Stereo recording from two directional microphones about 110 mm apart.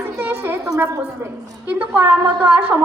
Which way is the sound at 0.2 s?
20° right (ahead or behind).